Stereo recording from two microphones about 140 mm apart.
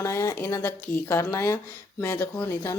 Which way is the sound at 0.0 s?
20° left (ahead or behind).